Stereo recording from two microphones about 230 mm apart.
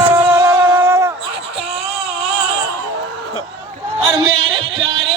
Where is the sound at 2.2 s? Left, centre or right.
Right.